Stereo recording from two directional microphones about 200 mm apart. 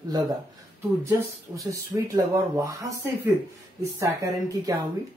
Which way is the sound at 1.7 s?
15° right (ahead or behind).